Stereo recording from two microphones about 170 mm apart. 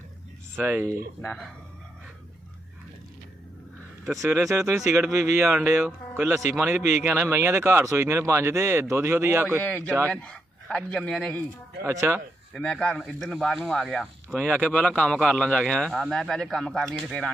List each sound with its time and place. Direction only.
0.6 s speech: 15° right (ahead or behind)
1.2 s speech: 5° left (ahead or behind)
4.2 s speech: 20° right (ahead or behind)
9.6 s speech: 10° left (ahead or behind)
9.8 s speech: 15° right (ahead or behind)
10.1 s a man's voice: 5° left (ahead or behind)
11.8 s speech: 15° right (ahead or behind)
12.5 s speech: 5° left (ahead or behind)